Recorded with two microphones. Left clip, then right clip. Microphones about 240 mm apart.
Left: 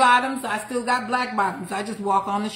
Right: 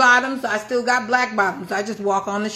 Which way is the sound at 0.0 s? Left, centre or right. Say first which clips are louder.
Right 2 dB; left.